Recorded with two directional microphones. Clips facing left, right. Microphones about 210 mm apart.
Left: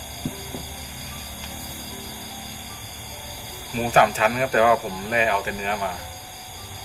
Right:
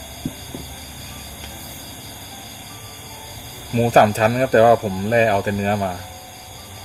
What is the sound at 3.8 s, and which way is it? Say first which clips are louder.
Speech: right 5 dB; 35° right (ahead or behind).